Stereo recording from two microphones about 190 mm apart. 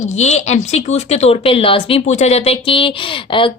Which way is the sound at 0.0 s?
35° left (ahead or behind).